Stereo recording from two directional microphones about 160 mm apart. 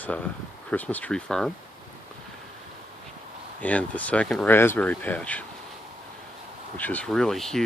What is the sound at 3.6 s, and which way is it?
Speech, 10° left (ahead or behind).